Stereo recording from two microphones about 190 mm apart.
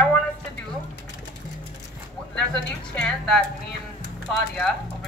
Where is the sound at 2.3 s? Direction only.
5° left (ahead or behind).